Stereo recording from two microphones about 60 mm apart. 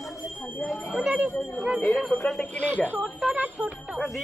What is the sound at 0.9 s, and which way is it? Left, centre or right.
Speech, centre.